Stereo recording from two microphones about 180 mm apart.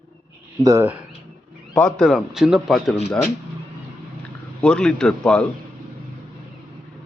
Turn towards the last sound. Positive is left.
turn(degrees=5)  # may be behind; listen again after turning